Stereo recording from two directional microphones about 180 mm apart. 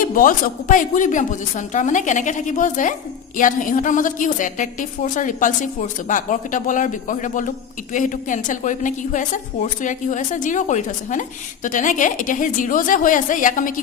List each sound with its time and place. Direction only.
0.1 s a woman's voice: 50° left (ahead or behind)